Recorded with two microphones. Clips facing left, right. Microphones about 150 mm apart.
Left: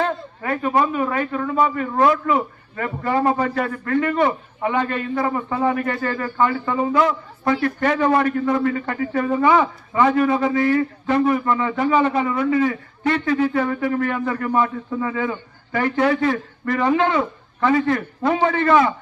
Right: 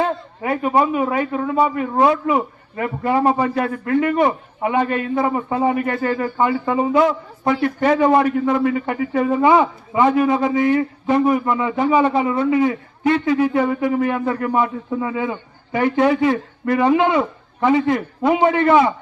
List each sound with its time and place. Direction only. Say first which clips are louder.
0.0 s a man's voice: right 2 dB; 15° right (ahead or behind)